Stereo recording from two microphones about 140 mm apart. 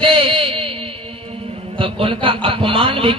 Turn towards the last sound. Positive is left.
turn(degrees=-40)  # may be behind; listen again after turning